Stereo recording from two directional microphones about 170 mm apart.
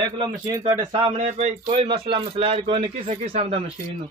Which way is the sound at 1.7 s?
30° right (ahead or behind).